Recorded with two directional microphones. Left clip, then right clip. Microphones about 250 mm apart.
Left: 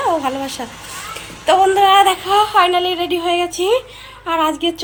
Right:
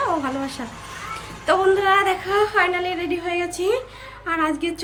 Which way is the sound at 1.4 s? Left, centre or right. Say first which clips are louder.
Left 6 dB; centre.